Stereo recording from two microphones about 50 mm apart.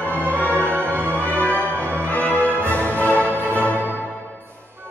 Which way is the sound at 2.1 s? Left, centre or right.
Left.